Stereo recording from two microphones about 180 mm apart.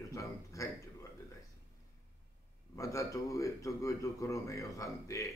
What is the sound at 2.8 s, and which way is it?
A man's voice, 15° left (ahead or behind).